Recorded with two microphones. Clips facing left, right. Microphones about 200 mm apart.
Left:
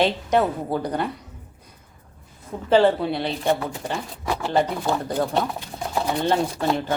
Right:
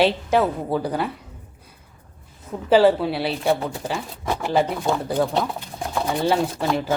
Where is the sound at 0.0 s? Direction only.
5° right (ahead or behind).